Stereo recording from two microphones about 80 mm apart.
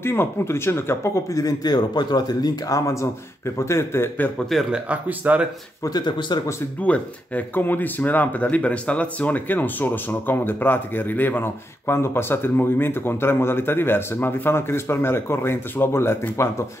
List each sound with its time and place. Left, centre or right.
0.0 s speech: left
3.5 s speech: left
4.5 s speech: centre
4.7 s speech: centre
5.9 s speech: left
6.8 s speech: centre